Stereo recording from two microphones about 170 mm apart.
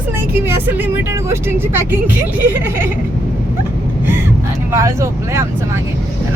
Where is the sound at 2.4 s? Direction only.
15° right (ahead or behind).